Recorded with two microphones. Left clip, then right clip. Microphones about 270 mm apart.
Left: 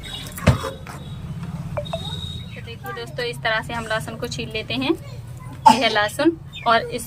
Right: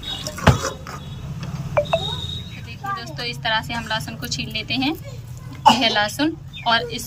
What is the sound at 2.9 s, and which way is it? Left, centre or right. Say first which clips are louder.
Speech: left 1 dB; centre.